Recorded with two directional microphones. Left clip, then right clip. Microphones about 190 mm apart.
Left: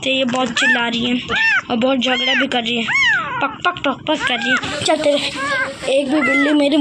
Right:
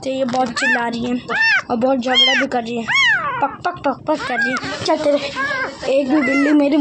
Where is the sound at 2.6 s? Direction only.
45° right (ahead or behind).